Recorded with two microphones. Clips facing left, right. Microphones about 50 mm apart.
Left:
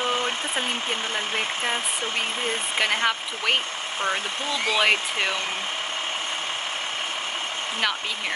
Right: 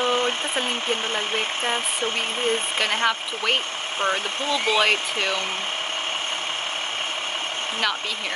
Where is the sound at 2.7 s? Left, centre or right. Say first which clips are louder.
Right 1 dB; centre.